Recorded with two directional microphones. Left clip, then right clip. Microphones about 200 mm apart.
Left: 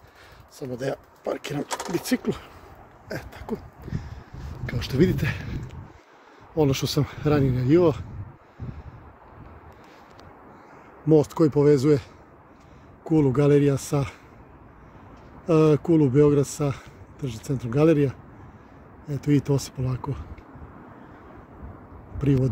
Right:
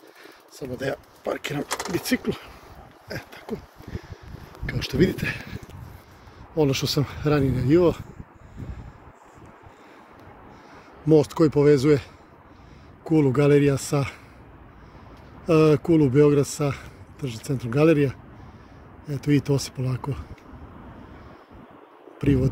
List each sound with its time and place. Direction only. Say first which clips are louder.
0.6 s speech: even; 10° left (ahead or behind)
1.7 s speech: right 1 dB; 30° right (ahead or behind)
2.0 s speech: even; 10° left (ahead or behind)
3.1 s a sound: left 1 dB; 20° left (ahead or behind)
4.6 s speech: even; 15° left (ahead or behind)
11.1 s speech: right 1 dB; 10° left (ahead or behind)
13.1 s speech: right 1 dB; 5° left (ahead or behind)
15.4 s speech: right 1 dB; 5° left (ahead or behind)
16.5 s a sound: right 1 dB; 5° left (ahead or behind)
17.7 s speech: right 1 dB; 5° left (ahead or behind)
22.2 s speech: right 1 dB; 5° left (ahead or behind)